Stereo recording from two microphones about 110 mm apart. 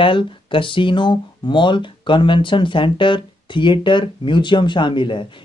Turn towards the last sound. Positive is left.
turn(degrees=50)  # may be behind; listen again after turning